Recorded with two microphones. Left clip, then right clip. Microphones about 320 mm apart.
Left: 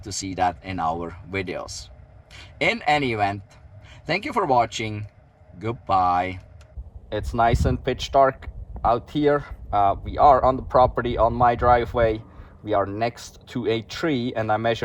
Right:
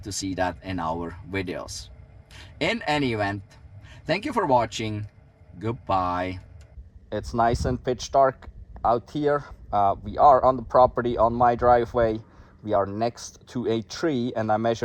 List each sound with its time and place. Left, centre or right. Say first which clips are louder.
0.0 s speech: left 3 dB; centre
7.2 s speech: left 2 dB; right